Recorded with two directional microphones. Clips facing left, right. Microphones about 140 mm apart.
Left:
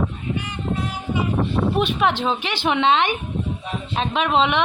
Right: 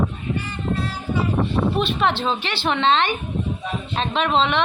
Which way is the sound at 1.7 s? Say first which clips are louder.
Left 1 dB; 10° left (ahead or behind).